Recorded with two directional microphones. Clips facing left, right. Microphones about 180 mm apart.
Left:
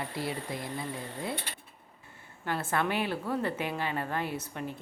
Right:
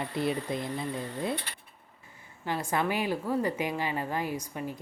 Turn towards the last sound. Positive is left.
turn(degrees=-10)  # may be behind; listen again after turning